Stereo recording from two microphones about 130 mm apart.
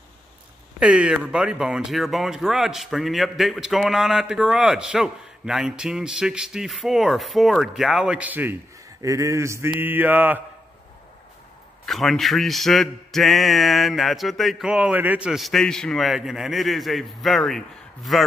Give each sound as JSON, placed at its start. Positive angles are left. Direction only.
{"t": 0.7, "sound": "speech", "side_deg": -10}
{"t": 9.0, "sound": "speech", "side_deg": -25}
{"t": 9.7, "sound": "mantra", "side_deg": -15}
{"t": 11.8, "sound": "speech", "side_deg": 0}